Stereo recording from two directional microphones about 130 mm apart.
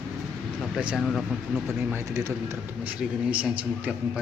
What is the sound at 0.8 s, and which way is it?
Speech, 5° right (ahead or behind).